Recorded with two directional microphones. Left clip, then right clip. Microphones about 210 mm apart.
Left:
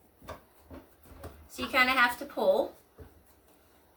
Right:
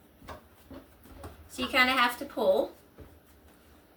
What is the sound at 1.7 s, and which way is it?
Speech, 5° left (ahead or behind).